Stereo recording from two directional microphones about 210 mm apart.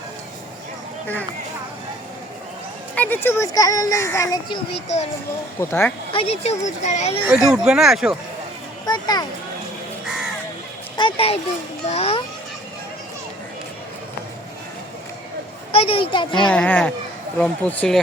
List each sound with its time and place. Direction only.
1.0 s speech: 10° left (ahead or behind)
2.9 s speech: 10° left (ahead or behind)
5.5 s speech: 10° left (ahead or behind)
6.1 s speech: 25° left (ahead or behind)
7.3 s speech: centre (ahead or behind)
8.9 s speech: 20° left (ahead or behind)
10.9 s a child's voice: 25° left (ahead or behind)
15.7 s speech: 25° left (ahead or behind)
16.5 s speech: 5° left (ahead or behind)